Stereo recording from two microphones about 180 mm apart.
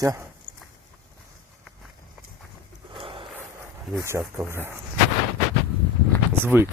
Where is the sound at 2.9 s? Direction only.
30° right (ahead or behind).